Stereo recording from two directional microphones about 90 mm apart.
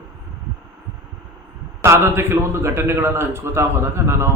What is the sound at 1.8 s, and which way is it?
A man's voice, 30° right (ahead or behind).